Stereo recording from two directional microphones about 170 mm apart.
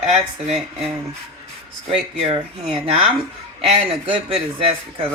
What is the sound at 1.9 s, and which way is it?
Speech, 35° right (ahead or behind).